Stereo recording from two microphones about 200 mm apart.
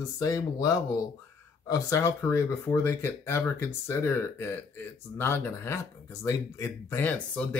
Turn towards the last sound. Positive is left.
turn(degrees=5)  # may be behind; listen again after turning